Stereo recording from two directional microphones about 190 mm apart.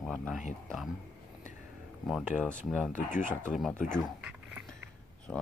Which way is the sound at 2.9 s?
40° left (ahead or behind).